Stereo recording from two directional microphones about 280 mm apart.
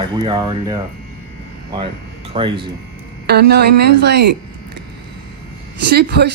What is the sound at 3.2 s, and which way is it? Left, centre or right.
Speech, right.